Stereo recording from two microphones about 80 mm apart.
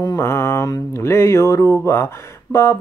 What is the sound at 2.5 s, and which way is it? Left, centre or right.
Speech, left.